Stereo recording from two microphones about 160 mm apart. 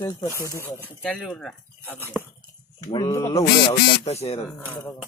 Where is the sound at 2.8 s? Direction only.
25° left (ahead or behind).